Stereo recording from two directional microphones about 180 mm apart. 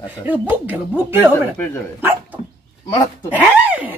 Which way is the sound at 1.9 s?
10° right (ahead or behind).